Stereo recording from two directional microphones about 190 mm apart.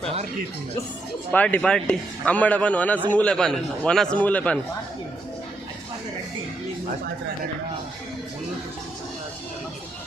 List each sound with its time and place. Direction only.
1.3 s a man's voice: 10° left (ahead or behind)